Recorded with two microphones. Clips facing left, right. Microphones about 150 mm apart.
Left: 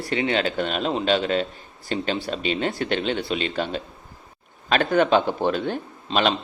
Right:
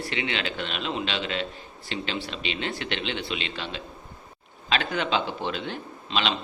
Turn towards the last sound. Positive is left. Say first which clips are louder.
# left 6 dB
turn(degrees=45)  # may be behind; listen again after turning